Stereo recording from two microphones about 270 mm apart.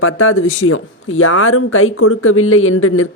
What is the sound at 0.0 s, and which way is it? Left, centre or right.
Speech, left.